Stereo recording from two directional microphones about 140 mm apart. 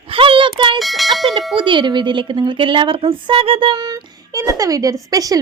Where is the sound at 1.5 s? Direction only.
35° right (ahead or behind).